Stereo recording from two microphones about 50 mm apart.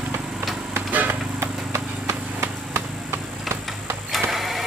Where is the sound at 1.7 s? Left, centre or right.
Right.